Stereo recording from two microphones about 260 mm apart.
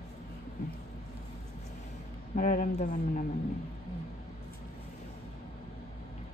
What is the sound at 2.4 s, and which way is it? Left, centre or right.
Speech, left.